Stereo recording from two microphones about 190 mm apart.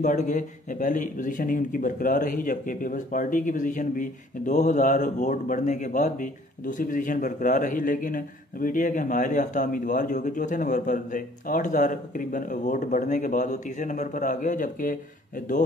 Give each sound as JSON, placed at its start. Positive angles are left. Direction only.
{"t": 0.0, "sound": "speech", "side_deg": 40}